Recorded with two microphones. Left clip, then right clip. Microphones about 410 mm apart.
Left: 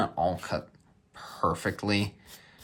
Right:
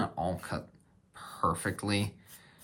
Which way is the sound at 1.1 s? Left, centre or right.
Centre.